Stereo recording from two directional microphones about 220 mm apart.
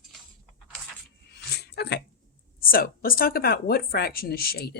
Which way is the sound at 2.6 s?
40° left (ahead or behind).